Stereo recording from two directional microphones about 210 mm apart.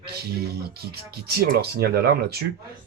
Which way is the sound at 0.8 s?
50° right (ahead or behind).